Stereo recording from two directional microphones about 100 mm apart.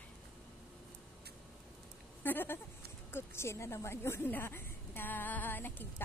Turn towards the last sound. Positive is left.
turn(degrees=20)  # may be behind; listen again after turning